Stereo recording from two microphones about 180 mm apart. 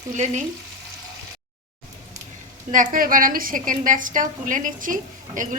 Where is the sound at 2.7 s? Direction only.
45° right (ahead or behind).